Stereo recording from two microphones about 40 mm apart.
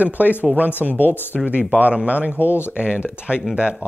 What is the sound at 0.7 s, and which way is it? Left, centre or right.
Speech, left.